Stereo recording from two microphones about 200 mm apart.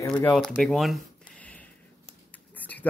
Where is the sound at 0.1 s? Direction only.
5° left (ahead or behind).